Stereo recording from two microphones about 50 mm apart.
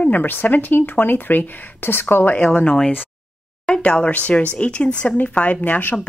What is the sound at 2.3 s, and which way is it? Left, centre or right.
Speech, left.